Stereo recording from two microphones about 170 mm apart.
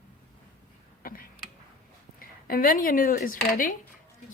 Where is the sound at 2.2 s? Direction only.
55° left (ahead or behind).